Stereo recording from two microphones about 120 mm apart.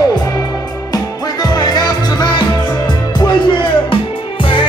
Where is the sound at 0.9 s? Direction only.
35° left (ahead or behind).